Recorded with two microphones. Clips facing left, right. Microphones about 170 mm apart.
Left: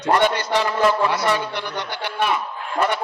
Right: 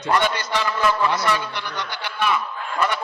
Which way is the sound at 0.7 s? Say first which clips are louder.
Left 2 dB; 30° left (ahead or behind).